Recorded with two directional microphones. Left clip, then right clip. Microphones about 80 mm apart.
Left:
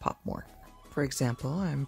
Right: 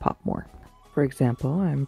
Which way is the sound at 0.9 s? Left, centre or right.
Right.